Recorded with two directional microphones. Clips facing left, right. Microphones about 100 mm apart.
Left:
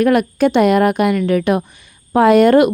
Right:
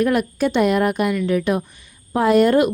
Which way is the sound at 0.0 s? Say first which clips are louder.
Left 5 dB; 70° left (ahead or behind).